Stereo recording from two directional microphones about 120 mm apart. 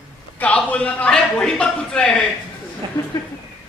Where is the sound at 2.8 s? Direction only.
40° right (ahead or behind).